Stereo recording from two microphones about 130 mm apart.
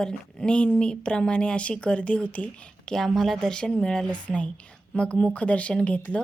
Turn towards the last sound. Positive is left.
turn(degrees=10)  # may be behind; listen again after turning